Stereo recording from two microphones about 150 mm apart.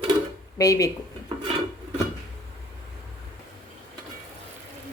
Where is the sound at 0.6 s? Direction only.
25° left (ahead or behind).